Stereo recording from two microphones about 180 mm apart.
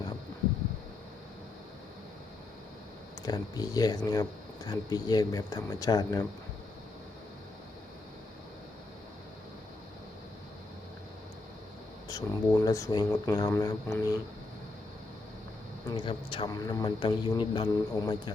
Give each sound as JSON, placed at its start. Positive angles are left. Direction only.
{"t": 3.2, "sound": "speech", "side_deg": 20}
{"t": 12.0, "sound": "speech", "side_deg": 15}
{"t": 15.9, "sound": "speech", "side_deg": 25}